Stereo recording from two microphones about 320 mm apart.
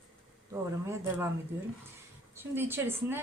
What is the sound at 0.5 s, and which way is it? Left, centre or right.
Speech, centre.